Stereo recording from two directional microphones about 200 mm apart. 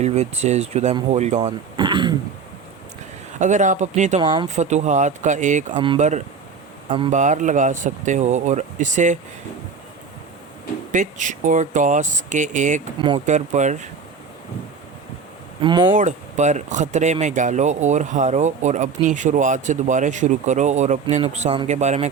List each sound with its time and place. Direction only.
0.0 s speech: 35° right (ahead or behind)
1.4 s throat clearing: 20° right (ahead or behind)
3.3 s speech: 35° right (ahead or behind)
4.2 s speech: 25° right (ahead or behind)
4.5 s speech: 35° right (ahead or behind)
5.7 s speech: 25° right (ahead or behind)
6.0 s speech: 35° right (ahead or behind)
10.9 s speech: 40° right (ahead or behind)
13.0 s speech: 25° right (ahead or behind)
13.2 s speech: 35° right (ahead or behind)
15.6 s speech: 20° right (ahead or behind)
16.0 s speech: 35° right (ahead or behind)